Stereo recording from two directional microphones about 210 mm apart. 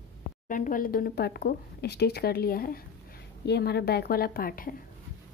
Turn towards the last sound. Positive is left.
turn(degrees=45)  # may be behind; listen again after turning